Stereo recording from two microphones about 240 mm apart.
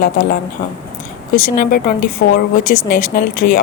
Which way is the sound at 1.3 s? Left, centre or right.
Left.